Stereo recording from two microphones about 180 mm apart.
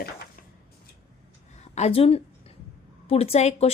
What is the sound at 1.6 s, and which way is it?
A woman's voice, 35° left (ahead or behind).